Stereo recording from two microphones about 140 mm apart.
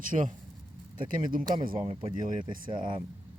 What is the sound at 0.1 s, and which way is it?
Speech, 45° right (ahead or behind).